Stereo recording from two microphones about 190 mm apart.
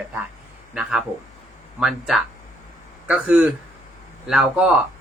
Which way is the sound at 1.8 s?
Centre (ahead or behind).